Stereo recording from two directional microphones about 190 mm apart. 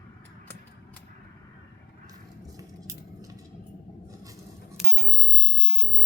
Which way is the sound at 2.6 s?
15° right (ahead or behind).